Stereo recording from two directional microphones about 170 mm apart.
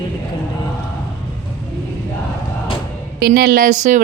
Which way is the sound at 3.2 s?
65° right (ahead or behind).